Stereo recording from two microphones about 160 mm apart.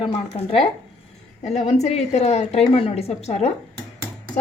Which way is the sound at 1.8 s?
45° left (ahead or behind).